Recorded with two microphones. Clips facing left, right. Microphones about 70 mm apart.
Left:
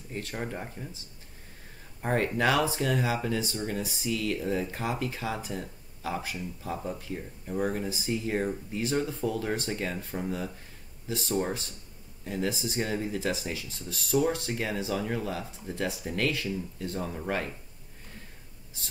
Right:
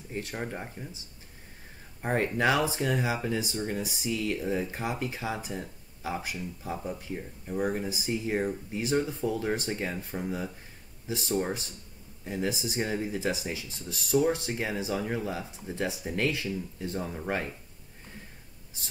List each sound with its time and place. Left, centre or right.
0.1 s speech: centre
0.4 s speech: centre
2.0 s speech: centre